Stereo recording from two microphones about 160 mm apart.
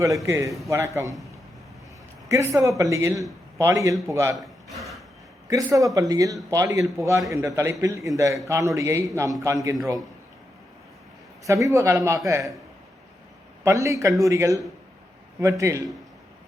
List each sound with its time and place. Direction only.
0.0 s a man's voice: 20° right (ahead or behind)
2.3 s a man's voice: 20° right (ahead or behind)
5.5 s a man's voice: 20° right (ahead or behind)
11.4 s a man's voice: 20° right (ahead or behind)
13.7 s a man's voice: 20° right (ahead or behind)